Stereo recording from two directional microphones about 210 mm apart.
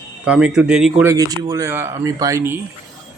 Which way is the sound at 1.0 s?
15° right (ahead or behind).